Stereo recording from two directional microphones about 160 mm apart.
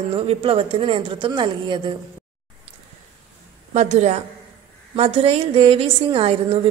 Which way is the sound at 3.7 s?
45° right (ahead or behind).